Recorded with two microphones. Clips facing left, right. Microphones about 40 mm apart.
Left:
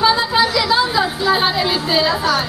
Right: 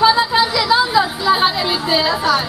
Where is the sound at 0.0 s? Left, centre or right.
Centre.